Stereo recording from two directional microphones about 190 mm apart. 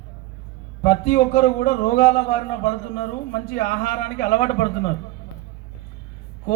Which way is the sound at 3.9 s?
45° left (ahead or behind).